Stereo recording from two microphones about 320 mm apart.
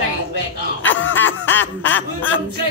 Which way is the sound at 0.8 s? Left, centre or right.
Left.